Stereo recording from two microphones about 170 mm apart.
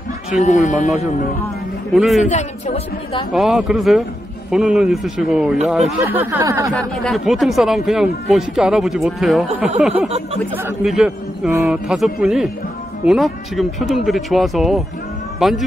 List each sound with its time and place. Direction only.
0.3 s speech: 40° left (ahead or behind)
2.0 s speech: centre (ahead or behind)
2.2 s a woman's voice: 40° left (ahead or behind)
3.3 s speech: centre (ahead or behind)
6.7 s speech: centre (ahead or behind)
10.0 s speech: 40° right (ahead or behind)
10.5 s a man's voice: 10° right (ahead or behind)